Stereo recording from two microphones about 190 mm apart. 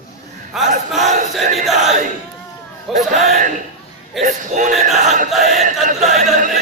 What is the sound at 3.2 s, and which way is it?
A man's voice, 35° right (ahead or behind).